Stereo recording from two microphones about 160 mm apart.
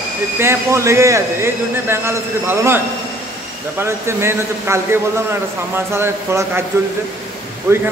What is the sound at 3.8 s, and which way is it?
A man's voice, 15° right (ahead or behind).